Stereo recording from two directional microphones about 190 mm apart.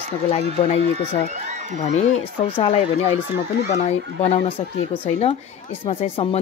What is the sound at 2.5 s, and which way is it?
Speech, 30° left (ahead or behind).